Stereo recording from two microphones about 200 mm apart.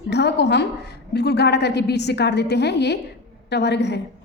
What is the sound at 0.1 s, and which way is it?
A woman's voice, 55° left (ahead or behind).